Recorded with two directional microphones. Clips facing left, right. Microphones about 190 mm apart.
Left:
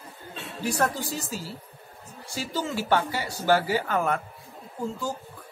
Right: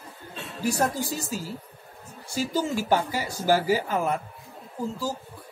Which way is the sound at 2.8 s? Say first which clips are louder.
Right 1 dB; 10° right (ahead or behind).